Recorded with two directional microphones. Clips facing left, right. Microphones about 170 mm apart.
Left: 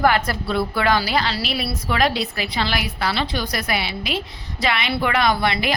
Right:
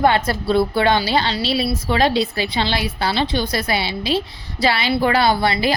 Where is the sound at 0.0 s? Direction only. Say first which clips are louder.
Right 2 dB; 25° right (ahead or behind).